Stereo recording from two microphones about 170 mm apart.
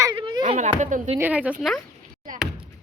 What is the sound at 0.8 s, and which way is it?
Speech, 45° right (ahead or behind).